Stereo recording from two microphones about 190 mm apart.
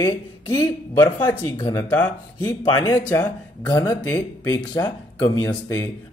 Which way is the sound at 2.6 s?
20° left (ahead or behind).